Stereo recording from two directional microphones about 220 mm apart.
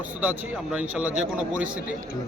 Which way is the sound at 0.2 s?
5° right (ahead or behind).